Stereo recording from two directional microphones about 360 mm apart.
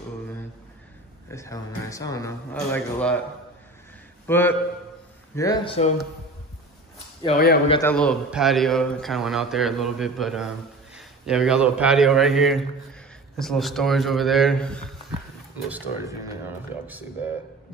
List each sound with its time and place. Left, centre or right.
1.3 s speech: centre
4.3 s a man's voice: centre
7.2 s speech: left
7.7 s a man's voice: centre